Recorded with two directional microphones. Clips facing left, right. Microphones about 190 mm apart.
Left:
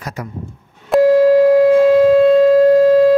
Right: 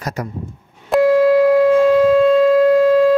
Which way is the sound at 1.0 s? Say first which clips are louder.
Left 2 dB; 40° left (ahead or behind).